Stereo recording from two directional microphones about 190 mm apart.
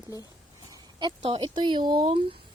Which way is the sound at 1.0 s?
25° right (ahead or behind).